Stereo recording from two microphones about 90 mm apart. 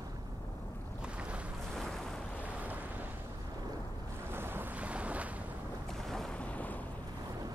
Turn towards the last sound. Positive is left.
turn(degrees=20)  # may be behind; listen again after turning